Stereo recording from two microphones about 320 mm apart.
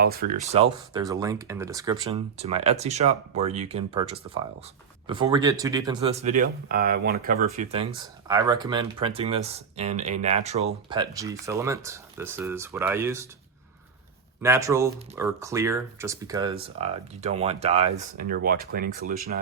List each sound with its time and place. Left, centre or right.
0.0 s speech: right; by 13.2 s centre
14.4 s speech: centre; by 19.1 s right